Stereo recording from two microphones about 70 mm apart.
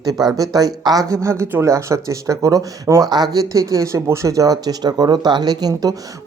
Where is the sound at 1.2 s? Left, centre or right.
Right.